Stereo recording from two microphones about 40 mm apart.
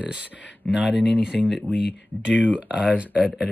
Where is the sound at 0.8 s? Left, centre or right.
Centre.